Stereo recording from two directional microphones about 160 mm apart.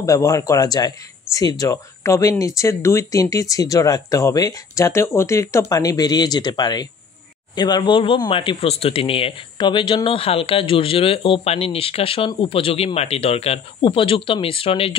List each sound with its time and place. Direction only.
0.0 s speech: 20° left (ahead or behind)